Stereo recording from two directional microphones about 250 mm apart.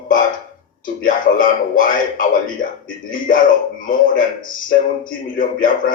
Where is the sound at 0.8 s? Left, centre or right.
Left.